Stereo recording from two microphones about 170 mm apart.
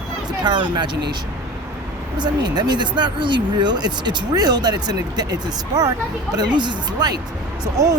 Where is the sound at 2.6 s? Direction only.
25° right (ahead or behind).